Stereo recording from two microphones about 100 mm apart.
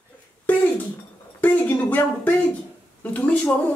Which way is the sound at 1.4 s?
15° left (ahead or behind).